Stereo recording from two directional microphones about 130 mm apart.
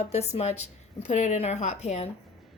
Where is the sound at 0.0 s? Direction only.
55° left (ahead or behind).